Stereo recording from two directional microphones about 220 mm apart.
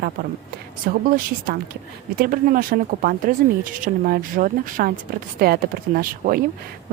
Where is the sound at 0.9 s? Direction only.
40° right (ahead or behind).